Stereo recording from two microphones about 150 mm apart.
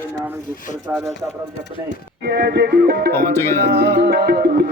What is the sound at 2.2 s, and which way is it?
Music, 90° right.